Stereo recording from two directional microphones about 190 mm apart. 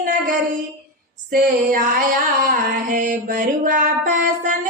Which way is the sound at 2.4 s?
45° right (ahead or behind).